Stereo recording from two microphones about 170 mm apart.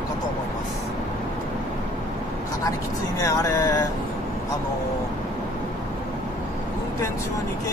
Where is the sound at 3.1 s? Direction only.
20° left (ahead or behind).